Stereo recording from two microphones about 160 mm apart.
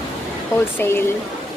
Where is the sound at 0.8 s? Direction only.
15° left (ahead or behind).